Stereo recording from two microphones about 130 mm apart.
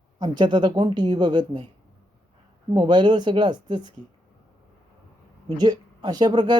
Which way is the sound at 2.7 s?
35° right (ahead or behind).